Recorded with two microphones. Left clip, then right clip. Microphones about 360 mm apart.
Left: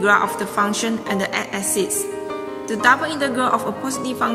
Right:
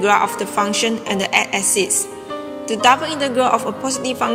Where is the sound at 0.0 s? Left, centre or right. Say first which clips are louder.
Right 1 dB; centre.